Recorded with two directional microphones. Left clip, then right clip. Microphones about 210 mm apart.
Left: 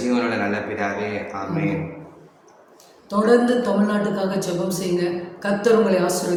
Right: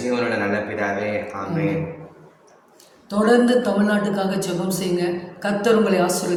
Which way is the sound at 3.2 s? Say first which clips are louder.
Even; 10° right (ahead or behind).